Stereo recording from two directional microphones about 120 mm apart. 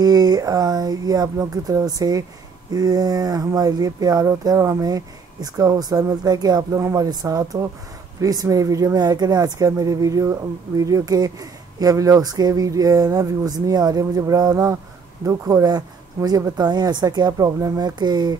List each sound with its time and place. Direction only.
0.0 s speech: 35° right (ahead or behind)